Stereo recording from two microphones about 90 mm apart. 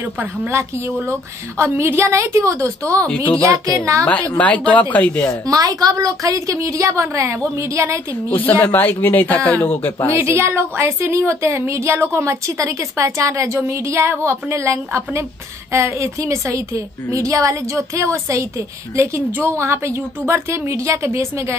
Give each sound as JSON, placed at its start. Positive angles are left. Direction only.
{"t": 0.0, "sound": "speech", "side_deg": -20}
{"t": 0.5, "sound": "speech", "side_deg": -30}
{"t": 4.0, "sound": "speech", "side_deg": 15}
{"t": 5.5, "sound": "speech", "side_deg": -40}
{"t": 8.3, "sound": "speech", "side_deg": 20}
{"t": 10.2, "sound": "speech", "side_deg": -30}